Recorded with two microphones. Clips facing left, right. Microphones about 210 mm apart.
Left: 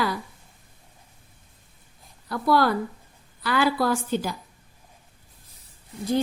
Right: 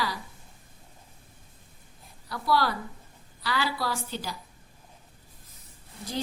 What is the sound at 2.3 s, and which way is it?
A woman's voice, 50° left (ahead or behind).